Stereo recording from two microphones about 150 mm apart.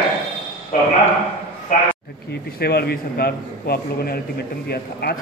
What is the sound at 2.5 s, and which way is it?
A man's voice, 90° left.